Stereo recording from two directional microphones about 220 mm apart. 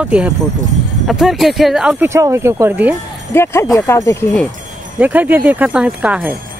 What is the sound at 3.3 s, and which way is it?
Speech, 10° left (ahead or behind).